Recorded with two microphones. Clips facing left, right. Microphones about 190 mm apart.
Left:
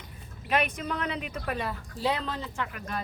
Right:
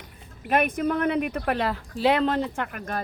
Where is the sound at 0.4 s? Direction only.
50° right (ahead or behind).